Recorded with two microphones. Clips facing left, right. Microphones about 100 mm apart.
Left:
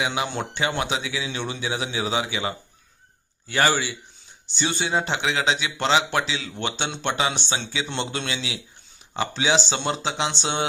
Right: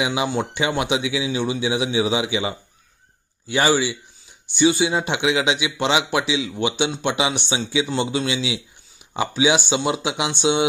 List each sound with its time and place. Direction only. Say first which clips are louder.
0.0 s a man's voice: right 4 dB; 15° right (ahead or behind)